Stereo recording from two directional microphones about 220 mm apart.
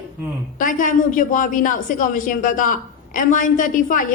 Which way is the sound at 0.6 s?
35° left (ahead or behind).